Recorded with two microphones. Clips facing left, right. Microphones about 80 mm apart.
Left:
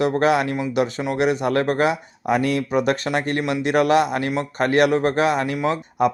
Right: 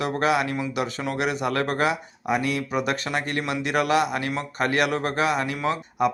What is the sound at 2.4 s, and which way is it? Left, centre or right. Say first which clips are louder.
Speech: left 5 dB; left.